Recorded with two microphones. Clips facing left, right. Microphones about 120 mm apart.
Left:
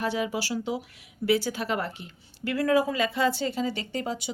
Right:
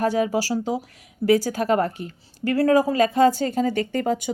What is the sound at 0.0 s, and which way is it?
A woman's voice, 45° right (ahead or behind).